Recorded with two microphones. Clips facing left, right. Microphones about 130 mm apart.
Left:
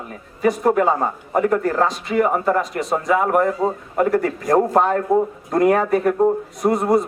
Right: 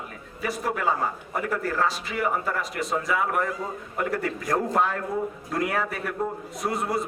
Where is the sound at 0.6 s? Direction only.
45° left (ahead or behind).